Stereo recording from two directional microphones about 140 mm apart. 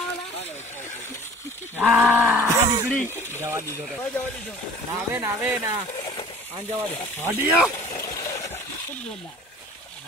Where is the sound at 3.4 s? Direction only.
20° right (ahead or behind).